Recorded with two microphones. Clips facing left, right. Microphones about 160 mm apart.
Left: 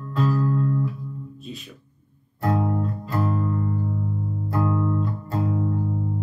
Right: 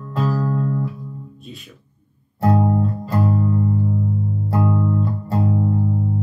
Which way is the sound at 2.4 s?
40° right (ahead or behind).